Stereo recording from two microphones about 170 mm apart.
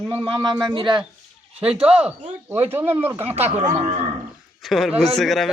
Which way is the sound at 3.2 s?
40° right (ahead or behind).